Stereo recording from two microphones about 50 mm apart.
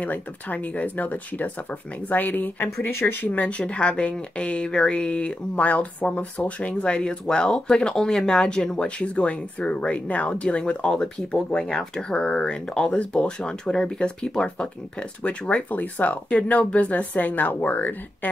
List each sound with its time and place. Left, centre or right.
0.0 s speech: left
2.8 s speech: left
3.2 s speech: left
6.7 s speech: centre
13.4 s speech: centre; by 18.3 s left